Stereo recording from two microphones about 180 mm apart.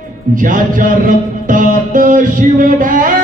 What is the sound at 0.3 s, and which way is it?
Music, 50° right (ahead or behind).